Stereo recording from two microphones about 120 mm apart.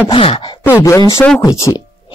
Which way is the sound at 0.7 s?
25° left (ahead or behind).